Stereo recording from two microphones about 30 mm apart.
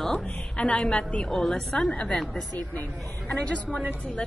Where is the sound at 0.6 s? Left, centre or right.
Left.